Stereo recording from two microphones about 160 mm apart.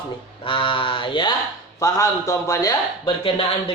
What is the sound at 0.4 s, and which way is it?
Speech, 35° left (ahead or behind).